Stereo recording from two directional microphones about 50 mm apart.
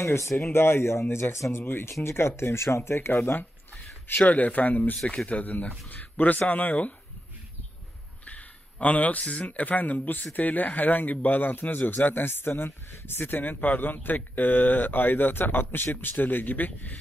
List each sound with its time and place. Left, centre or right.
0.0 s speech: left
0.5 s speech: left
1.6 s speech: left
4.3 s speech: left
5.0 s speech: left
8.3 s a sound: left
9.2 s speech: centre
9.5 s speech: left